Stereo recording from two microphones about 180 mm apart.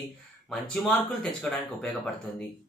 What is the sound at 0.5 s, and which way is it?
Speech, centre (ahead or behind).